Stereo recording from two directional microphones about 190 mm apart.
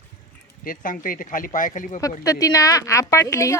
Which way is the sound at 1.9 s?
15° left (ahead or behind).